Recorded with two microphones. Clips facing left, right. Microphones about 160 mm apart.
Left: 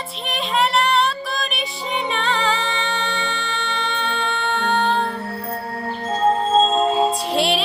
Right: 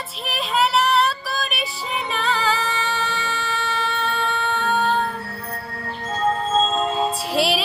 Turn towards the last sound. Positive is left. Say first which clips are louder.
# left 1 dB
turn(degrees=0)  # may be behind; listen again after turning